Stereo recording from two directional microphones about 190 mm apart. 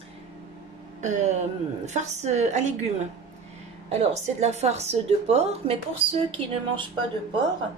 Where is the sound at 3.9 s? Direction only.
35° right (ahead or behind).